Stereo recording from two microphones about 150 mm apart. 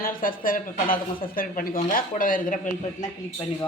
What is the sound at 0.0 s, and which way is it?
Speech, 70° left (ahead or behind).